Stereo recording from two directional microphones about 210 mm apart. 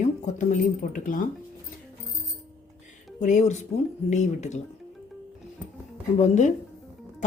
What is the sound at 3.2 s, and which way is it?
Speech, 35° left (ahead or behind).